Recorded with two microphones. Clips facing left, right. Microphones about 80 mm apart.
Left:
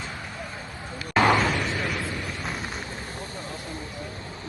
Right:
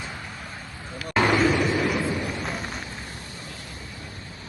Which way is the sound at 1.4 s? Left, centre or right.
Centre.